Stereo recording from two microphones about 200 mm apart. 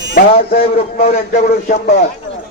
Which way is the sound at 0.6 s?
30° left (ahead or behind).